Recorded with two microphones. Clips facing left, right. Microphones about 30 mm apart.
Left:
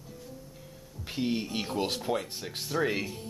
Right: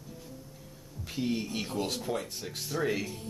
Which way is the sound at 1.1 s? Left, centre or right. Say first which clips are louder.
Left 1 dB; left.